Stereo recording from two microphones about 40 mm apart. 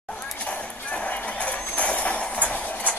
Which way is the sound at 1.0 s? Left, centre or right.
Left.